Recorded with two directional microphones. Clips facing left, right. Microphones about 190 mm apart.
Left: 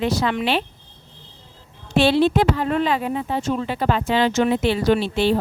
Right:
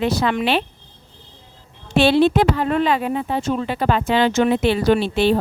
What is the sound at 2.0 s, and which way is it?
Speech, 65° right (ahead or behind).